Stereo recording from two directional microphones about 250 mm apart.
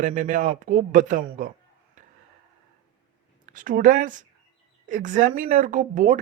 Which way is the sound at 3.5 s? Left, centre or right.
Right.